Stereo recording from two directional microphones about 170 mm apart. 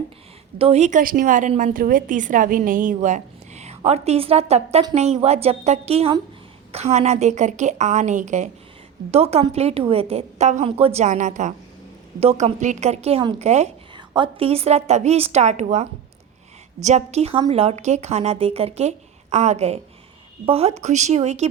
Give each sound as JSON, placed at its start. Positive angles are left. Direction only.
{"t": 0.6, "sound": "a woman's voice", "side_deg": -40}
{"t": 13.9, "sound": "speech", "side_deg": -30}